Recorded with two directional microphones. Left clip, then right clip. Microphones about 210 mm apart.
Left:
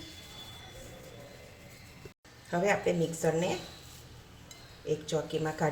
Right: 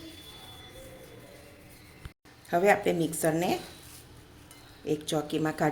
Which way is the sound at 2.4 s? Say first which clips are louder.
Right 5 dB; 45° right (ahead or behind).